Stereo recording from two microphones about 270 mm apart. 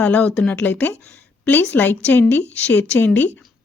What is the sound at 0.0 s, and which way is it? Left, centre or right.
A woman's voice, centre.